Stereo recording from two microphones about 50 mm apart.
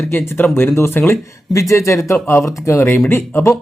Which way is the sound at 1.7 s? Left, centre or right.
Left.